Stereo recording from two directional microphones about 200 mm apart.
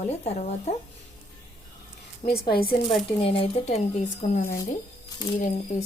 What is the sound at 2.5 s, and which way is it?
Speech, 50° left (ahead or behind).